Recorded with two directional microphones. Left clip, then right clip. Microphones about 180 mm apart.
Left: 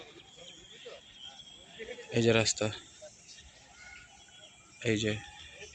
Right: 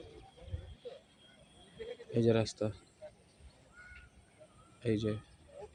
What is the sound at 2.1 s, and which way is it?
Speech, centre (ahead or behind).